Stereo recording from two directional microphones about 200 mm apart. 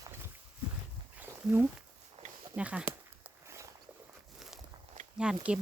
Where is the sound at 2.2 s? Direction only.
30° right (ahead or behind).